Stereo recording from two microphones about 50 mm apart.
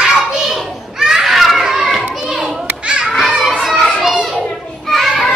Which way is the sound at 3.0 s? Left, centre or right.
Centre.